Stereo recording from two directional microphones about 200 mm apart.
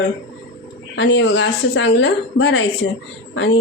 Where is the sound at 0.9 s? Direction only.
65° left (ahead or behind).